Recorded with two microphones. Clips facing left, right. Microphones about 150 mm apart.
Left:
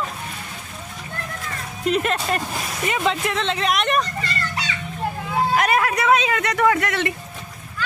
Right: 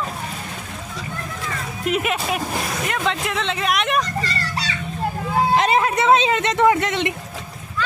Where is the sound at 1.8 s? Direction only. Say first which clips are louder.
Left 1 dB; 5° right (ahead or behind).